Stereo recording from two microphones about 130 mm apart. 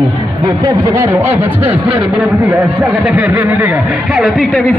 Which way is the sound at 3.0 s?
10° right (ahead or behind).